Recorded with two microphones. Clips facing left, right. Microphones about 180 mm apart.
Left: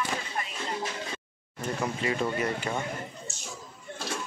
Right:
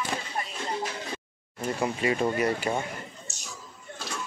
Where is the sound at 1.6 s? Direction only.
10° right (ahead or behind).